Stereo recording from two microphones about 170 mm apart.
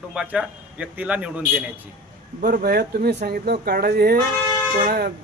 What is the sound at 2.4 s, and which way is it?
Speech, 60° right (ahead or behind).